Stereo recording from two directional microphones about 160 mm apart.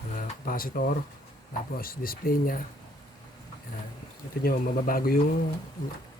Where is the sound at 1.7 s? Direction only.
65° left (ahead or behind).